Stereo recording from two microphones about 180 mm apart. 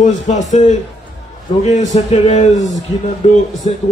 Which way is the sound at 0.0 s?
40° left (ahead or behind).